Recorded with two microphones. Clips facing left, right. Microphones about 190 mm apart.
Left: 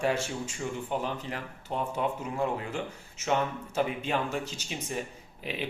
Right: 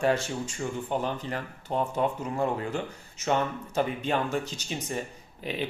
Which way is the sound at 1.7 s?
35° right (ahead or behind).